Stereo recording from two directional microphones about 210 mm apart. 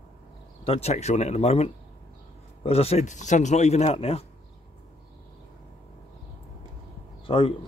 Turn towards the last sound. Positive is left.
turn(degrees=25)  # may be behind; listen again after turning